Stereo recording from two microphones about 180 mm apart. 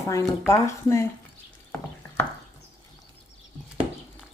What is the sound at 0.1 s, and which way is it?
Speech, 15° left (ahead or behind).